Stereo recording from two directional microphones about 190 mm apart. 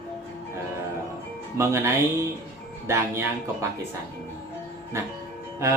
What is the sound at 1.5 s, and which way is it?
Speech, 15° right (ahead or behind).